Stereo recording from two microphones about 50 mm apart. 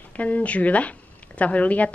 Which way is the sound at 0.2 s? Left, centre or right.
Left.